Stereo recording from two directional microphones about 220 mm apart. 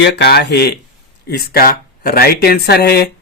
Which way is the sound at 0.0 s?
50° left (ahead or behind).